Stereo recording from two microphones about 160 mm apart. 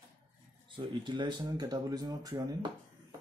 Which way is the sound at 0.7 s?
30° right (ahead or behind).